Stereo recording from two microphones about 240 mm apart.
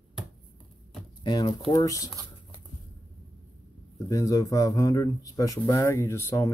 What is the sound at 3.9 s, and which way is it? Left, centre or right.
Speech, centre.